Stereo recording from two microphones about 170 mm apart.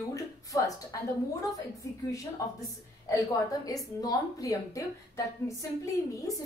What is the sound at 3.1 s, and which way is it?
A woman's voice, 20° left (ahead or behind).